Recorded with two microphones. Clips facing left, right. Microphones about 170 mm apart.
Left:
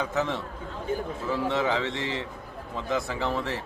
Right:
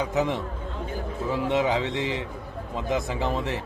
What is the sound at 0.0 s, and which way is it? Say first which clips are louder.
A man's voice: right 3 dB; 15° right (ahead or behind).